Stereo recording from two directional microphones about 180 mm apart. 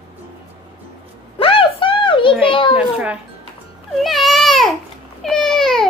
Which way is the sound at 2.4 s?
30° left (ahead or behind).